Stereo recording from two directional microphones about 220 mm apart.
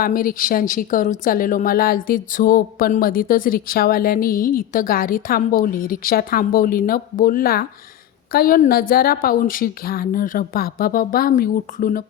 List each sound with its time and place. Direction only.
0.0 s a woman's voice: 40° left (ahead or behind)